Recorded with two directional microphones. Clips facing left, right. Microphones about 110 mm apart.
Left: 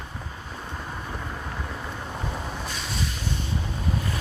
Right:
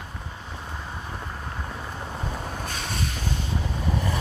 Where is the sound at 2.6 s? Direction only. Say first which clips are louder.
Right 1 dB; 50° right (ahead or behind).